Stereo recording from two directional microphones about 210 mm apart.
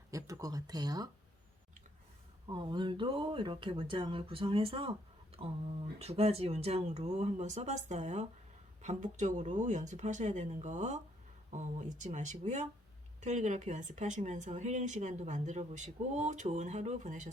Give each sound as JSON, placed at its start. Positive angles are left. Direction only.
{"t": 0.1, "sound": "speech", "side_deg": -15}
{"t": 2.5, "sound": "speech", "side_deg": -20}